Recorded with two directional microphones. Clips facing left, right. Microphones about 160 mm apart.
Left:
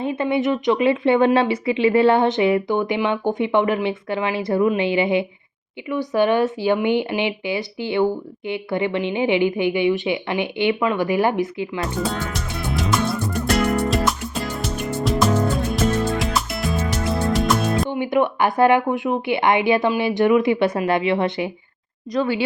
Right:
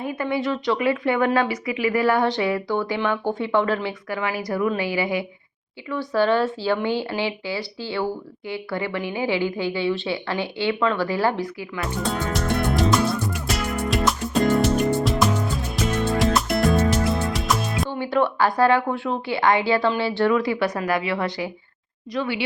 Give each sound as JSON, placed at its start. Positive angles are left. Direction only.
{"t": 0.0, "sound": "a woman's voice", "side_deg": 25}
{"t": 12.4, "sound": "music", "side_deg": -50}
{"t": 12.7, "sound": "music", "side_deg": 0}
{"t": 13.6, "sound": "music", "side_deg": 60}
{"t": 13.9, "sound": "music", "side_deg": 0}
{"t": 16.6, "sound": "music", "side_deg": -45}
{"t": 16.9, "sound": "music", "side_deg": 0}
{"t": 17.8, "sound": "a woman's voice", "side_deg": 15}
{"t": 22.1, "sound": "speech", "side_deg": 40}